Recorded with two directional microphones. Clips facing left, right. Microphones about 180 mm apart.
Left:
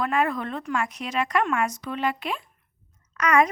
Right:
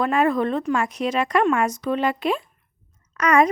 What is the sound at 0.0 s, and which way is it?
A woman's voice, 30° right (ahead or behind).